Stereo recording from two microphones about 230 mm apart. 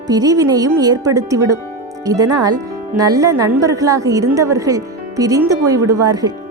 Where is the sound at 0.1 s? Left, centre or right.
Centre.